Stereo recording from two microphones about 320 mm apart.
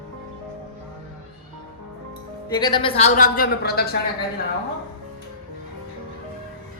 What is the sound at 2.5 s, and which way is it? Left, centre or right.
A woman's voice, centre.